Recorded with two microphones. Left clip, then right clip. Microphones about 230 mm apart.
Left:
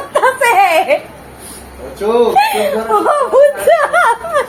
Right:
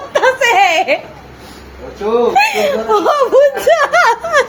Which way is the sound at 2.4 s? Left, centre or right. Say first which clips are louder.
Even; right.